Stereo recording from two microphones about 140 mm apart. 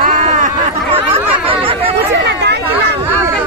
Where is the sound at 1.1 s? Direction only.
40° right (ahead or behind).